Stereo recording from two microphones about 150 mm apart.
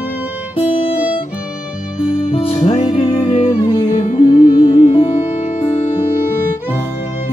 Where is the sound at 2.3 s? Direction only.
45° left (ahead or behind).